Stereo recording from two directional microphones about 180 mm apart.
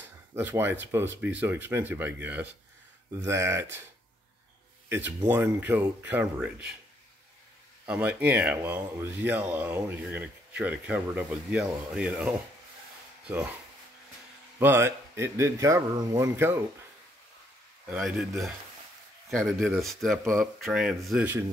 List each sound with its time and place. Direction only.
0.0 s speech: 10° right (ahead or behind)
4.8 s a sound: 15° right (ahead or behind)
5.3 s speech: 10° right (ahead or behind)
7.8 s speech: 10° right (ahead or behind)
14.6 s speech: 15° right (ahead or behind)
17.8 s speech: 5° right (ahead or behind)